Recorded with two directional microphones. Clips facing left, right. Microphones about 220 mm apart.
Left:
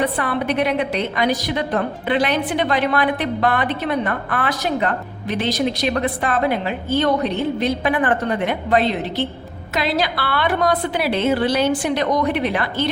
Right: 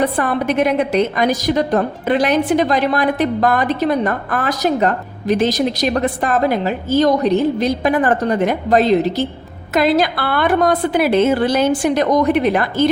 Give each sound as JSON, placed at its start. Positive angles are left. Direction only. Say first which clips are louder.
{"t": 0.0, "sound": "a woman's voice", "louder": "right 4 dB", "side_deg": -45}